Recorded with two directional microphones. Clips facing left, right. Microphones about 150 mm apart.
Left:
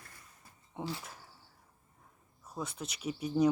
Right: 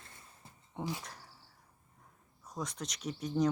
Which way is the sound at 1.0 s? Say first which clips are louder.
Even; 5° left (ahead or behind).